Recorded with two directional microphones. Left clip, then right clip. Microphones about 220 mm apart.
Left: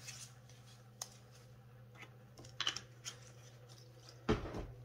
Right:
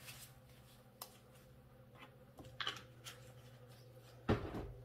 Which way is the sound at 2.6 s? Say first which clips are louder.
Left 4 dB; 25° left (ahead or behind).